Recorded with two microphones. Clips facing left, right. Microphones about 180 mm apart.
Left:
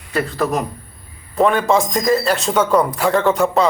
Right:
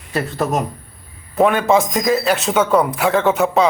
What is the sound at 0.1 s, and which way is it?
Speech, 20° right (ahead or behind).